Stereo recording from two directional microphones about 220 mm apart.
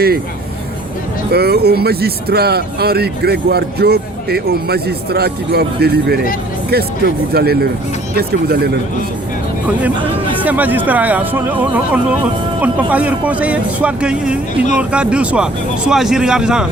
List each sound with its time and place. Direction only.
1.3 s speech: 45° right (ahead or behind)
10.4 s a man's voice: 10° right (ahead or behind)